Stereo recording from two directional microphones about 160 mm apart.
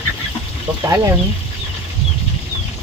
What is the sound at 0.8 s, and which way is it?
Speech, 20° right (ahead or behind).